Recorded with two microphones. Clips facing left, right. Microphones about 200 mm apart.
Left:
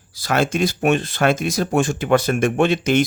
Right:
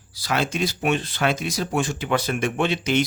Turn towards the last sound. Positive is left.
turn(degrees=50)  # may be behind; listen again after turning